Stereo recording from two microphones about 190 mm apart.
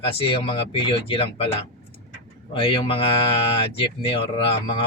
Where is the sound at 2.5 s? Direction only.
30° left (ahead or behind).